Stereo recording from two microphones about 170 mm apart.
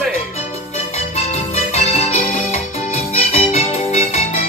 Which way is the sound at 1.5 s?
40° left (ahead or behind).